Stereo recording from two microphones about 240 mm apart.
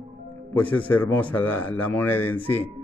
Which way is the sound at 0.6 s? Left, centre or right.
Centre.